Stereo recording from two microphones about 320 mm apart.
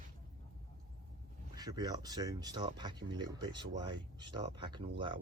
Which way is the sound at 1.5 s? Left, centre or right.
Centre.